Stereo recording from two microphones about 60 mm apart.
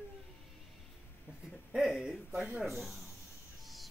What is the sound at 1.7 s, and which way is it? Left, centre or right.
Speech, centre.